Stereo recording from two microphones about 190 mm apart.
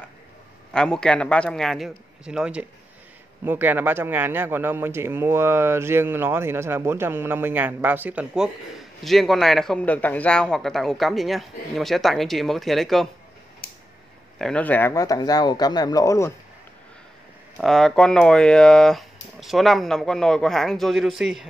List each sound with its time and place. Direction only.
0.7 s speech: 5° left (ahead or behind)
14.4 s speech: 5° left (ahead or behind)
17.6 s speech: centre (ahead or behind)